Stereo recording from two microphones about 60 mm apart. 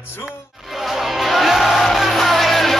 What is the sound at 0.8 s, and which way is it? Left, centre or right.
Music, centre.